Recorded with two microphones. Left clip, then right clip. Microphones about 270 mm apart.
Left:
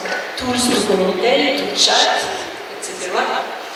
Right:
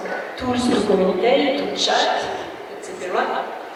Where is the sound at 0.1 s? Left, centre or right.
Centre.